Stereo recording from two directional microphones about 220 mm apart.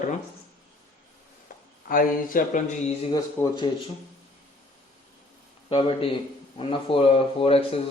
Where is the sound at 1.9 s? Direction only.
40° left (ahead or behind).